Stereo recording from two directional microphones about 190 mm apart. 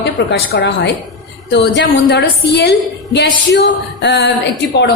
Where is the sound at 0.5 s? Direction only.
65° left (ahead or behind).